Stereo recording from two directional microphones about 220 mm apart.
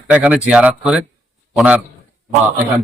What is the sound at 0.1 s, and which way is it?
A man's voice, 5° right (ahead or behind).